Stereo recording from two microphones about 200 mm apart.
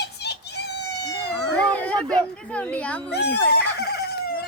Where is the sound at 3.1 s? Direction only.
55° left (ahead or behind).